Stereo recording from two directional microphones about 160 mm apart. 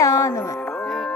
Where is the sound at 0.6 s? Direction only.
5° left (ahead or behind).